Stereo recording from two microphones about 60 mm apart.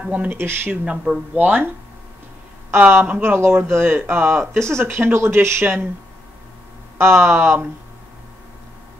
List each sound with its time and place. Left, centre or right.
0.0 s speech: right
0.3 s speech: right
0.8 s speech: centre
1.3 s speech: right
3.2 s speech: right
7.0 s speech: right